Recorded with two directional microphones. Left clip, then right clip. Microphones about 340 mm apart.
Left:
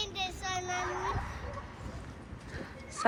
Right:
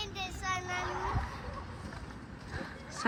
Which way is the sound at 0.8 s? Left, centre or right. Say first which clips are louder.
Left 1 dB; right.